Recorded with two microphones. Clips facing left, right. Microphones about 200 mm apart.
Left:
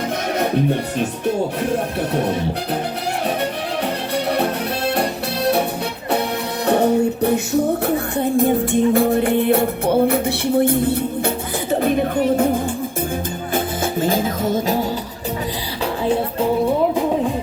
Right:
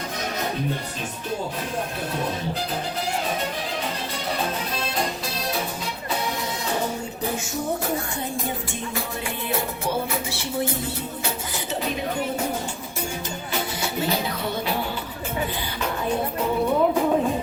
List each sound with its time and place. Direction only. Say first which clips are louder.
0.3 s music: left 10 dB; 60° left (ahead or behind)
2.1 s music: left 8 dB; 65° left (ahead or behind)
4.1 s music: left 10 dB; 65° left (ahead or behind)
6.7 s music: left 14 dB; 60° left (ahead or behind)
11.7 s a sound: left 10 dB; 55° left (ahead or behind)
13.5 s music: left 7 dB; 50° left (ahead or behind)